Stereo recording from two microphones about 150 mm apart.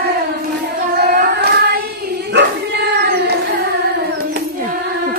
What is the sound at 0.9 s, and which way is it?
Singing, 90° right.